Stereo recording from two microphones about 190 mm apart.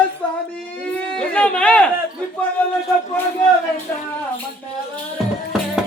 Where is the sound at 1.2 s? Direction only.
5° left (ahead or behind).